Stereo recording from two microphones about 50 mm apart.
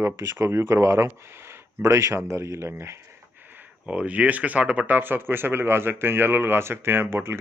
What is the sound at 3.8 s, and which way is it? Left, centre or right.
Speech, right.